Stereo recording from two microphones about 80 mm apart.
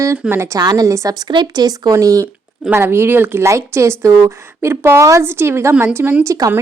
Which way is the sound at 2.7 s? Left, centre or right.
Right.